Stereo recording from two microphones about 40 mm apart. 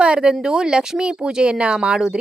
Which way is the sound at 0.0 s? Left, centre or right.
Right.